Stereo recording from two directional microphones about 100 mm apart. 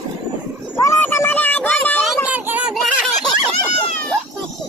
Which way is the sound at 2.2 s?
15° right (ahead or behind).